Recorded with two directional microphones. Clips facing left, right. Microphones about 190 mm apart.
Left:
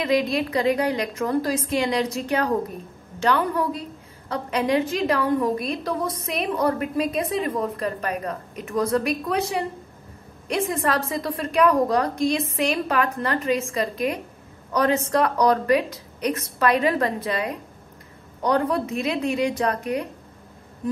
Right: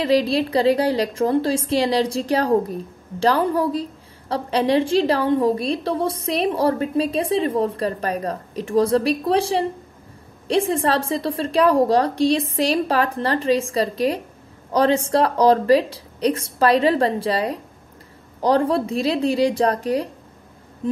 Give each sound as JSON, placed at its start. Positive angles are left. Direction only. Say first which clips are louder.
{"t": 0.0, "sound": "a woman's voice", "louder": "right 4 dB", "side_deg": -30}